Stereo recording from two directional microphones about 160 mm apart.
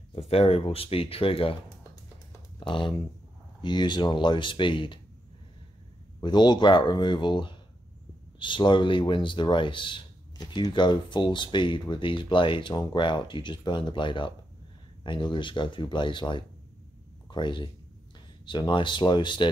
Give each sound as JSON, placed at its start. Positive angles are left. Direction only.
{"t": 0.3, "sound": "speech", "side_deg": 35}
{"t": 2.6, "sound": "speech", "side_deg": 30}
{"t": 6.2, "sound": "speech", "side_deg": 25}